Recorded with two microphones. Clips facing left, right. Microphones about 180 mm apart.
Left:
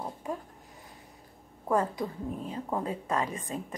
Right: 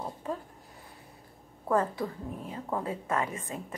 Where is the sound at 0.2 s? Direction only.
10° left (ahead or behind).